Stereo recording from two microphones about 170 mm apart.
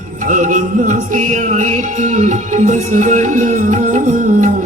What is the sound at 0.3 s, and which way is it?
Music, 50° right (ahead or behind).